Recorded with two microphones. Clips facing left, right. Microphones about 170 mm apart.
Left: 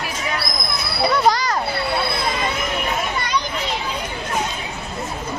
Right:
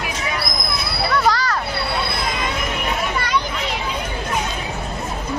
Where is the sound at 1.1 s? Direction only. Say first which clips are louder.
Even; 20° left (ahead or behind).